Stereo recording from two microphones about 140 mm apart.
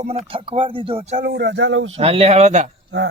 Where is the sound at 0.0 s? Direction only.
45° right (ahead or behind).